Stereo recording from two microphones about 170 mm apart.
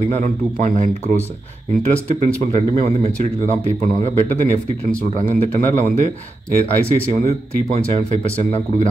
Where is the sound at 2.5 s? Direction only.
40° right (ahead or behind).